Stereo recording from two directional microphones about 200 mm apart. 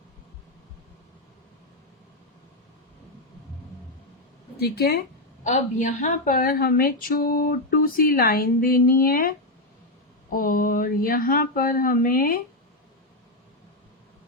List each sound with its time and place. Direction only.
4.5 s speech: 50° left (ahead or behind)
5.4 s a woman's voice: 40° left (ahead or behind)
10.3 s a woman's voice: 45° left (ahead or behind)